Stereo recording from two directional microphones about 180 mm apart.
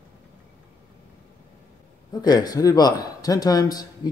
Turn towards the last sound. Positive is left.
turn(degrees=20)  # may be behind; listen again after turning